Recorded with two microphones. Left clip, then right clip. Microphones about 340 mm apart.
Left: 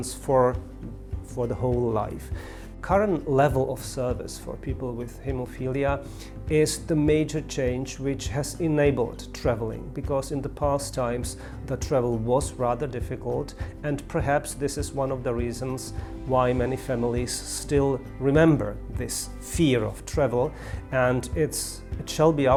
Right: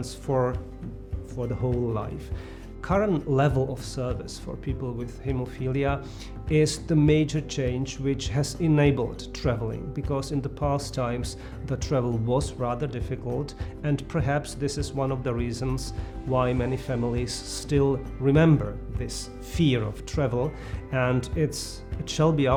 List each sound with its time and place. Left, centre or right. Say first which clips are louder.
0.0 s speech: left 5 dB; left
2.8 s speech: left 2 dB; left
4.6 s speech: left 1 dB; left
16.3 s speech: left 3 dB; left